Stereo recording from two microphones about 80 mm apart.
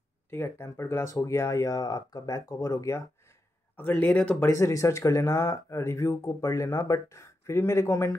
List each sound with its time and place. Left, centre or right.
0.3 s speech: left
3.7 s a man's voice: left
4.5 s speech: left